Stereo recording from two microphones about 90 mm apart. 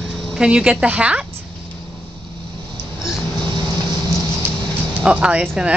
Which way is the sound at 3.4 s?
50° right (ahead or behind).